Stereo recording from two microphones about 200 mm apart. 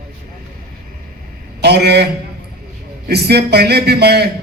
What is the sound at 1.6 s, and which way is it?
Speech, 55° right (ahead or behind).